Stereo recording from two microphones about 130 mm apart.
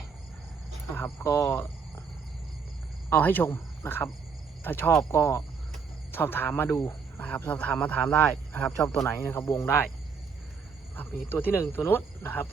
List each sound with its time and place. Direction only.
0.9 s speech: 15° left (ahead or behind)
3.1 s speech: 15° left (ahead or behind)
8.2 s speech: 25° left (ahead or behind)
8.6 s speech: 5° left (ahead or behind)
9.0 s speech: 15° left (ahead or behind)
10.9 s speech: 15° left (ahead or behind)